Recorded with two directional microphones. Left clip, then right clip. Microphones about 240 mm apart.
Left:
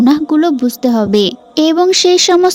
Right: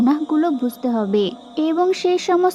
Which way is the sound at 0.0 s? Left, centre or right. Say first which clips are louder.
Left 7 dB; left.